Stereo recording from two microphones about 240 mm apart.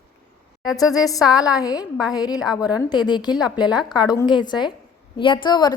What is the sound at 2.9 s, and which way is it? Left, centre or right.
A woman's voice, centre.